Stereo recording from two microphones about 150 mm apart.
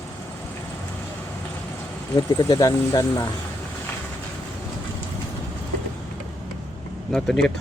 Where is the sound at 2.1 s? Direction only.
25° left (ahead or behind).